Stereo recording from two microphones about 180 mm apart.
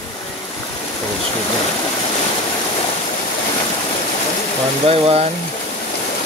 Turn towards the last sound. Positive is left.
turn(degrees=-35)  # may be behind; listen again after turning